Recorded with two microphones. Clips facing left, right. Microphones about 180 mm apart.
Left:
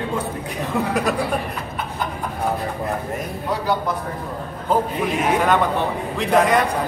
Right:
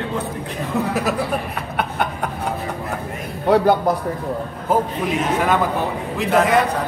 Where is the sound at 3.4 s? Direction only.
65° right (ahead or behind).